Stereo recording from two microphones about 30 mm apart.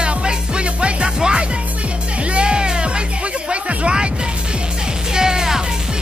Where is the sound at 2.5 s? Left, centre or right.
Right.